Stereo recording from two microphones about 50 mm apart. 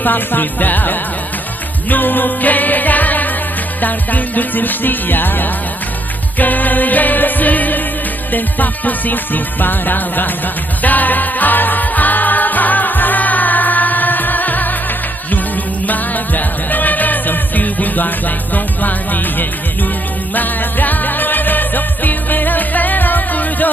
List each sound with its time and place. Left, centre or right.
0.0 s music: left